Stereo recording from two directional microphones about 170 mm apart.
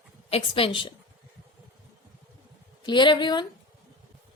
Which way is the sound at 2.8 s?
25° left (ahead or behind).